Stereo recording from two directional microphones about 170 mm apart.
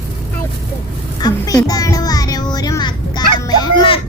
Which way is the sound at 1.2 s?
20° left (ahead or behind).